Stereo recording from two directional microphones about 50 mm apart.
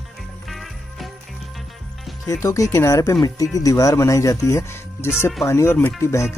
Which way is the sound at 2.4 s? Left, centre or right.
Left.